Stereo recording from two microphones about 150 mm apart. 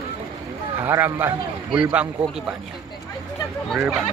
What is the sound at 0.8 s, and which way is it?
A man's voice, 15° right (ahead or behind).